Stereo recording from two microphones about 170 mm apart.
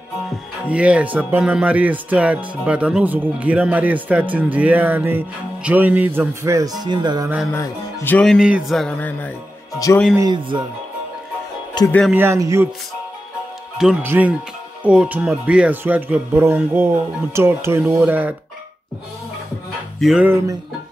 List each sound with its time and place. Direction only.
0.7 s speech: 10° right (ahead or behind); by 7.2 s 25° right (ahead or behind)
7.5 s music: 15° left (ahead or behind)
10.1 s speech: 25° right (ahead or behind)
11.8 s speech: 25° left (ahead or behind)
12.1 s speech: 15° right (ahead or behind)
14.0 s speech: 10° right (ahead or behind)
20.0 s music: centre (ahead or behind)
20.2 s speech: 15° right (ahead or behind)